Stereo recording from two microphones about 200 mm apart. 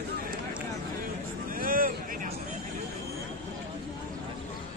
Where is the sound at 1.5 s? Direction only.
45° right (ahead or behind).